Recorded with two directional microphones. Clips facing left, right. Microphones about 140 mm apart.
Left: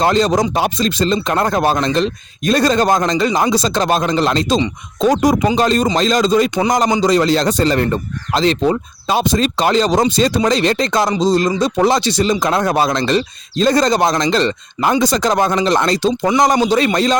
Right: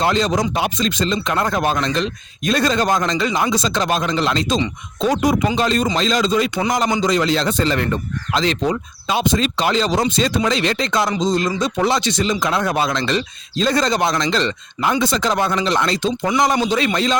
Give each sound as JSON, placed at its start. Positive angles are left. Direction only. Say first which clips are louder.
{"t": 0.0, "sound": "speech", "louder": "left 4 dB", "side_deg": 40}